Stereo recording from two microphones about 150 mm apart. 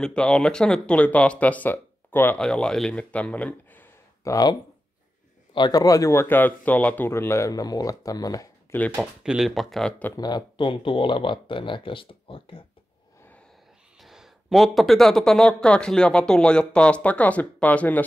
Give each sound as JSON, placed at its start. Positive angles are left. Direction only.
{"t": 0.0, "sound": "a man's voice", "side_deg": 5}
{"t": 8.9, "sound": "speech", "side_deg": -10}
{"t": 10.1, "sound": "speech", "side_deg": 25}
{"t": 14.0, "sound": "speech", "side_deg": 0}